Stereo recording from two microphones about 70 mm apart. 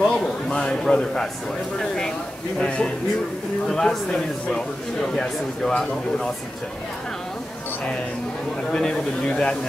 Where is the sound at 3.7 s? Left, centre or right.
Centre.